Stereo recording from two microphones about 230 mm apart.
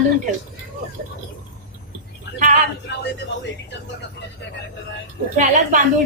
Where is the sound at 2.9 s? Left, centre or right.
Left.